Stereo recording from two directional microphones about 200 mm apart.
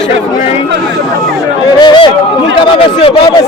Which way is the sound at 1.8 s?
25° left (ahead or behind).